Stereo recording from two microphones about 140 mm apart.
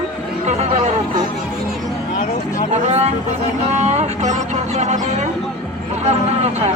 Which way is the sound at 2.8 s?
50° right (ahead or behind).